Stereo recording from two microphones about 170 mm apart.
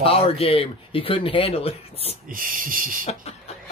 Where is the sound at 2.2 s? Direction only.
55° right (ahead or behind).